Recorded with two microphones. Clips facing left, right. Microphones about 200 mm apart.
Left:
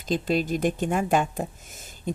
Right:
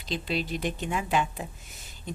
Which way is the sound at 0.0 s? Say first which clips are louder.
Left 6 dB; 45° left (ahead or behind).